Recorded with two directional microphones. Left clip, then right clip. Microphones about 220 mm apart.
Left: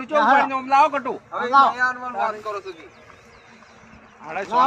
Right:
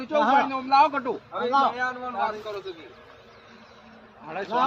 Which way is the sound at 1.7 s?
5° right (ahead or behind).